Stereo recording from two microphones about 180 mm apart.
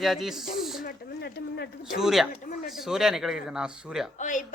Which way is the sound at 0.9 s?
65° left (ahead or behind).